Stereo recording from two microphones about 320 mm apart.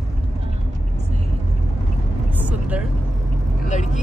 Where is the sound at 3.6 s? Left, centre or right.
Left.